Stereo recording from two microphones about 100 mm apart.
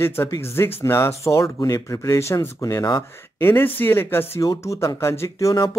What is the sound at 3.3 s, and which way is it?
Speech, 25° left (ahead or behind).